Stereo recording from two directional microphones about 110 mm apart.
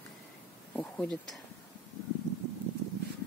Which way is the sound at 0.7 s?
10° left (ahead or behind).